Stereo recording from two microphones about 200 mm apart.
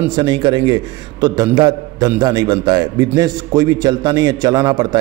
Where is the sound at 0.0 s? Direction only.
20° right (ahead or behind).